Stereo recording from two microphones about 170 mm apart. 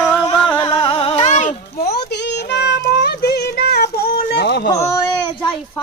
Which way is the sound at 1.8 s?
75° left (ahead or behind).